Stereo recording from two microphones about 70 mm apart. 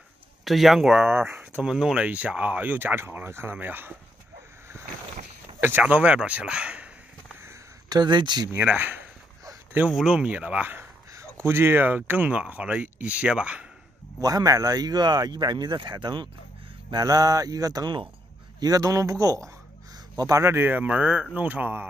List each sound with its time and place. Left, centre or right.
0.5 s speech: centre
1.1 s speech: right
1.6 s speech: centre
2.0 s speech: right
5.6 s speech: right
5.9 s speech: centre
7.9 s speech: right
8.5 s speech: right
9.8 s speech: centre
14.2 s speech: right
16.9 s speech: right
20.4 s speech: right